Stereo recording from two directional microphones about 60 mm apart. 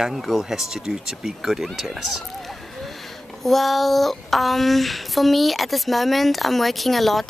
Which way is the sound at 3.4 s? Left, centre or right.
Centre.